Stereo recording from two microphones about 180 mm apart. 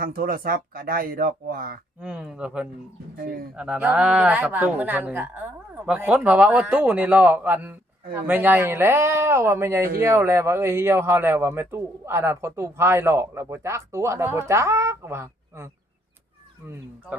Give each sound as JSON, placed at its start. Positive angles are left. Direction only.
{"t": 0.0, "sound": "speech", "side_deg": -50}
{"t": 2.0, "sound": "speech", "side_deg": -5}
{"t": 3.2, "sound": "speech", "side_deg": -50}
{"t": 3.5, "sound": "speech", "side_deg": -5}